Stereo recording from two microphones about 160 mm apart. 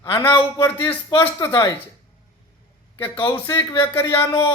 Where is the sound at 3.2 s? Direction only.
20° left (ahead or behind).